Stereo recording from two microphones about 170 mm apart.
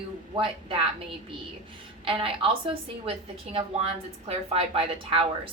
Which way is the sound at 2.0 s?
30° right (ahead or behind).